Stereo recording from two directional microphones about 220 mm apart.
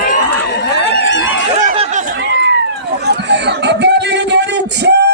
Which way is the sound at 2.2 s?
50° right (ahead or behind).